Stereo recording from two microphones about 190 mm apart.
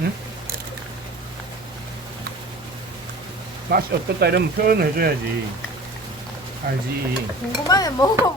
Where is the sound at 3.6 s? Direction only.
55° right (ahead or behind).